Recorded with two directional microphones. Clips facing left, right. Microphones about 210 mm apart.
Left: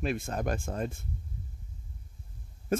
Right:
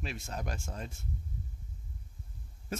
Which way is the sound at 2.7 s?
50° left (ahead or behind).